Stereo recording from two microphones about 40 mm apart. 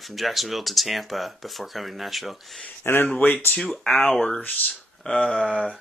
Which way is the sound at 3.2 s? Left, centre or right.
Left.